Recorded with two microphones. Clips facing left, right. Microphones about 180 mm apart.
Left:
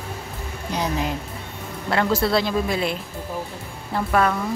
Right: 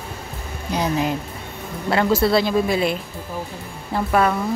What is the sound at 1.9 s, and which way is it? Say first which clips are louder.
Speech: right 3 dB; 5° right (ahead or behind).